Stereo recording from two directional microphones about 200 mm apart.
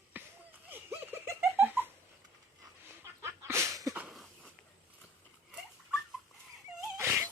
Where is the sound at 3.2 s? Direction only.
15° right (ahead or behind).